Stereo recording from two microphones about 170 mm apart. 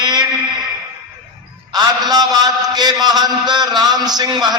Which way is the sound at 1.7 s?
25° right (ahead or behind).